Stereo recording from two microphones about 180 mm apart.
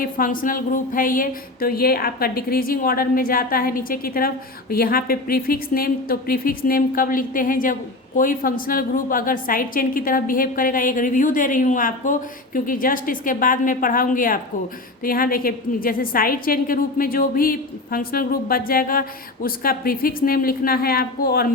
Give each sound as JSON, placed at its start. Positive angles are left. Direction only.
{"t": 0.0, "sound": "a woman's voice", "side_deg": 50}